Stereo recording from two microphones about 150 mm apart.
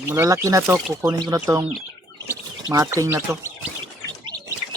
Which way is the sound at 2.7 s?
20° right (ahead or behind).